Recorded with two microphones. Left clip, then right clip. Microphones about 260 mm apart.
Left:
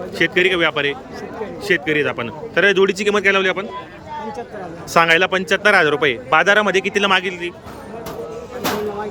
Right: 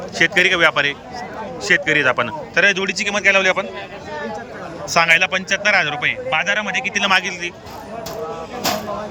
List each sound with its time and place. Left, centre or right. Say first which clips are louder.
0.1 s speech: right 1 dB; centre
4.9 s speech: left 1 dB; centre